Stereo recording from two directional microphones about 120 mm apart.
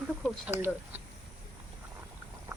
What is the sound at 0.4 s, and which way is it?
Speech, 20° right (ahead or behind).